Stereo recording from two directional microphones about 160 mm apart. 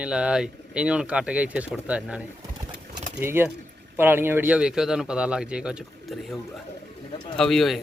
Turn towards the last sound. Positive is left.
turn(degrees=0)  # may be behind; listen again after turning